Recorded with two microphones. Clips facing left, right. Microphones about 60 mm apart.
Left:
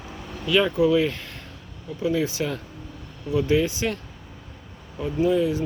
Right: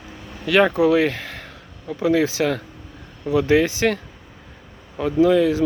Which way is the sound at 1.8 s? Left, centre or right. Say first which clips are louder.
Right 5 dB; right.